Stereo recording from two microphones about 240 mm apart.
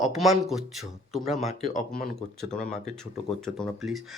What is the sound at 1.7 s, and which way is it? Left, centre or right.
Speech, left.